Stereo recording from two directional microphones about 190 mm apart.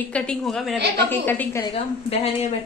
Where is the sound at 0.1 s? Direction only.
5° left (ahead or behind).